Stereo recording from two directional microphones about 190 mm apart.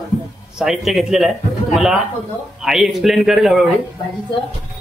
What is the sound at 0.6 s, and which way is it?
Speech, centre (ahead or behind).